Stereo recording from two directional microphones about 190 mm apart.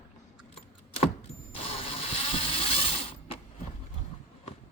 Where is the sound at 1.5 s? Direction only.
30° left (ahead or behind).